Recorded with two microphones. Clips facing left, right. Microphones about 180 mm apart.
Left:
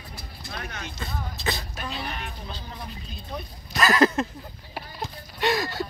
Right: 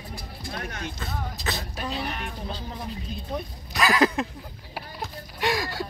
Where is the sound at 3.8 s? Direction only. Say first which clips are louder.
Left 1 dB; 15° right (ahead or behind).